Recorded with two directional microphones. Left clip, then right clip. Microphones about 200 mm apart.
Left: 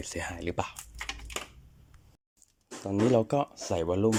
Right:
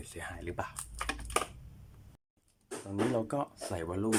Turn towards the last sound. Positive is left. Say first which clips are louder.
# left 8 dB
turn(degrees=10)  # may be behind; listen again after turning